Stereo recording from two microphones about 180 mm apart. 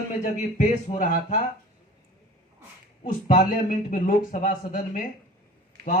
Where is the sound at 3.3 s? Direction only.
45° left (ahead or behind).